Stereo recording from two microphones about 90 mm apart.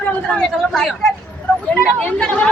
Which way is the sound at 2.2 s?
15° left (ahead or behind).